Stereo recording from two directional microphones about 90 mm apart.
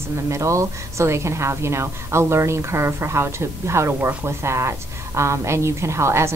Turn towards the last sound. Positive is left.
turn(degrees=-30)  # may be behind; listen again after turning